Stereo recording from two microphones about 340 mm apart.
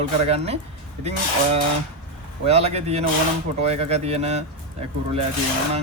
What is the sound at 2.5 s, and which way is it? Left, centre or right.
Speech, centre.